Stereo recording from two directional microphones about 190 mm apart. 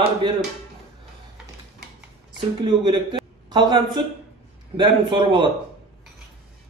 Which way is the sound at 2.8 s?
25° right (ahead or behind).